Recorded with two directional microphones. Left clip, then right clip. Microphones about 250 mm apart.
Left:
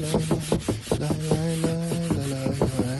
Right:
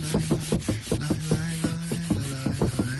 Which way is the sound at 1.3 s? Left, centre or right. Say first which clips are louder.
Left 4 dB; centre.